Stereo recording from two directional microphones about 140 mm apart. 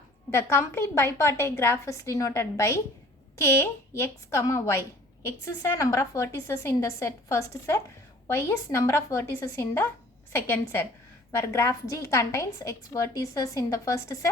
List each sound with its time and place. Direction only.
0.3 s a woman's voice: 20° left (ahead or behind)